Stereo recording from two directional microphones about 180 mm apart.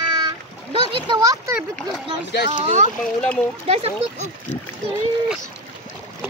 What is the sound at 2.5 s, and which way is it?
Speech, 40° right (ahead or behind).